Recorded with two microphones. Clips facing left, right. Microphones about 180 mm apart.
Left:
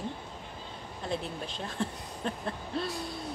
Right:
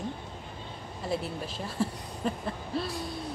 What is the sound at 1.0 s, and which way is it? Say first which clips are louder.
A woman's voice: right 2 dB; 5° right (ahead or behind).